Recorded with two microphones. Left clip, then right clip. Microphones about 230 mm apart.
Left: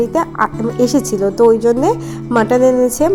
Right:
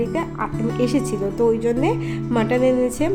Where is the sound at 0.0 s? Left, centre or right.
Left.